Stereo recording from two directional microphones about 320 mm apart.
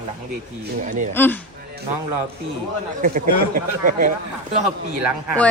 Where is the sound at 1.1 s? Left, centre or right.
Centre.